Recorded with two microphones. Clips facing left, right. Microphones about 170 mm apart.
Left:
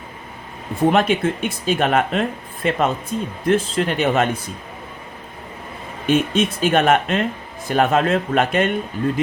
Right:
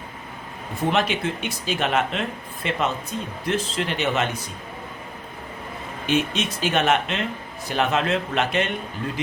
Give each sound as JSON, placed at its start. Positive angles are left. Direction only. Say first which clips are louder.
{"t": 0.8, "sound": "speech", "louder": "left 6 dB", "side_deg": 50}
{"t": 6.1, "sound": "speech", "louder": "left 6 dB", "side_deg": 50}